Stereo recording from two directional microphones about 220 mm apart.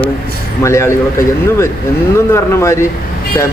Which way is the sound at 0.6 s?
10° left (ahead or behind).